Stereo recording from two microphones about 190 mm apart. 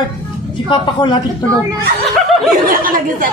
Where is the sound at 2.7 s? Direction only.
50° right (ahead or behind).